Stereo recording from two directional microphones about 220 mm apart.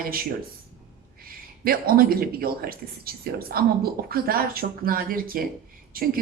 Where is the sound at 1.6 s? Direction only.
40° right (ahead or behind).